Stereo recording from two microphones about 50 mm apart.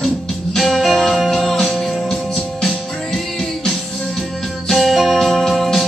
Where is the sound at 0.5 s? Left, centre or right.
Centre.